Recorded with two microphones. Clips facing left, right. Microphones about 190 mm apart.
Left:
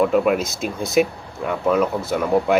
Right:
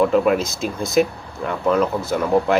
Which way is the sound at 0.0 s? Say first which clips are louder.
Right 1 dB; 5° left (ahead or behind).